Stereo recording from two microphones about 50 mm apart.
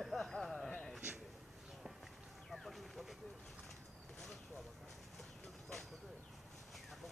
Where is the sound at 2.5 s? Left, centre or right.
Centre.